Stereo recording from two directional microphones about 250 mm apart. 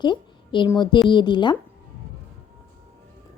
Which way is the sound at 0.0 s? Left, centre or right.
Centre.